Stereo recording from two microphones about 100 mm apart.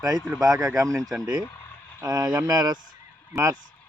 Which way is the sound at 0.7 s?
35° right (ahead or behind).